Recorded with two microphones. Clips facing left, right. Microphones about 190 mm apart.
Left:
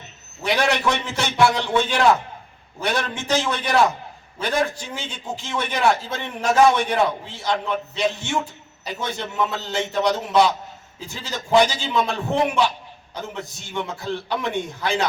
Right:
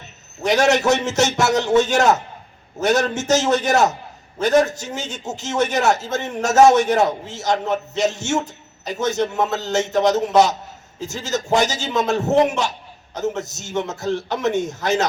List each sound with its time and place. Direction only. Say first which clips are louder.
0.4 s a man's voice: right 5 dB; 45° right (ahead or behind)